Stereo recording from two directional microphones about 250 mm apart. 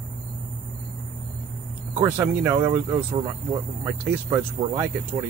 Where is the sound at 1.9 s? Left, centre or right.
Centre.